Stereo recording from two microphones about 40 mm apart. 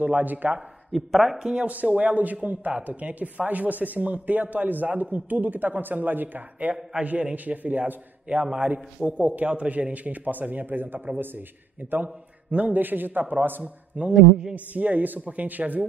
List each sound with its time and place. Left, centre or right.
0.0 s speech: right
0.9 s speech: centre
1.7 s speech: right
7.0 s speech: right
7.3 s a man's voice: right
11.9 s speech: right
14.0 s speech: right